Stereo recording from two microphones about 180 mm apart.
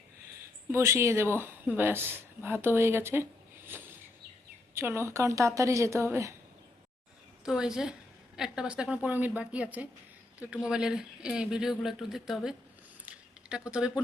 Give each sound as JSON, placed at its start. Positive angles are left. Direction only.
{"t": 0.7, "sound": "a woman's voice", "side_deg": -15}
{"t": 3.7, "sound": "a sound", "side_deg": -10}
{"t": 4.7, "sound": "a woman's voice", "side_deg": -15}
{"t": 7.4, "sound": "a woman's voice", "side_deg": -5}